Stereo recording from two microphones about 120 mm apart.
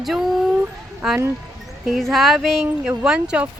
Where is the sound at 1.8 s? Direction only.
5° right (ahead or behind).